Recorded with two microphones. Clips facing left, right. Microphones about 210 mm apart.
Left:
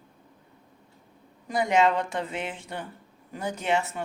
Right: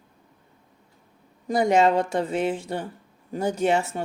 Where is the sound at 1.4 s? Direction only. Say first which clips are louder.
Right 4 dB; 40° right (ahead or behind).